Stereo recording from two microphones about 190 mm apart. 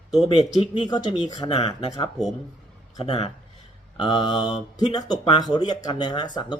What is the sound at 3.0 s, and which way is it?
Speech, 30° left (ahead or behind).